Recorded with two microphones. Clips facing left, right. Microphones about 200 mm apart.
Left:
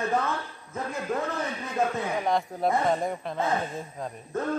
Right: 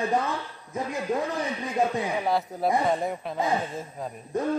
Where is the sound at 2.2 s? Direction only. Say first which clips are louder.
Left 2 dB; 5° right (ahead or behind).